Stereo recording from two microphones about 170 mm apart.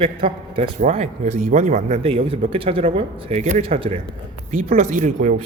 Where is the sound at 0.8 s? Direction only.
45° right (ahead or behind).